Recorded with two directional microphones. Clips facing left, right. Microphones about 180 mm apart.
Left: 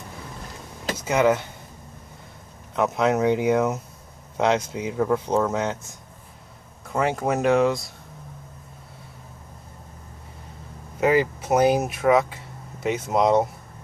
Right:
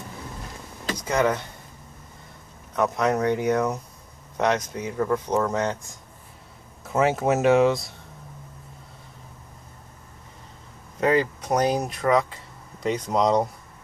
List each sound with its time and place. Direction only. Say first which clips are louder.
0.9 s speech: left 3 dB; 10° left (ahead or behind)
2.7 s speech: left 1 dB; 20° left (ahead or behind); by 7.9 s centre (ahead or behind)
11.0 s speech: left 1 dB; 5° left (ahead or behind)